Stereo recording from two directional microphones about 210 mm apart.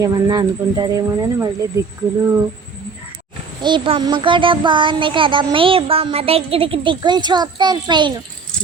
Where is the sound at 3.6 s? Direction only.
25° right (ahead or behind).